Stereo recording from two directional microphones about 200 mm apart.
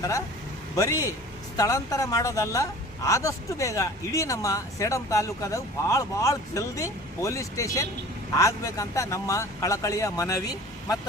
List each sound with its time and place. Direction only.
0.8 s a woman's voice: 15° left (ahead or behind)